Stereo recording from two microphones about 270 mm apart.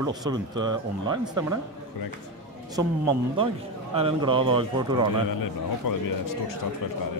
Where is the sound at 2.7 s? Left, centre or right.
Centre.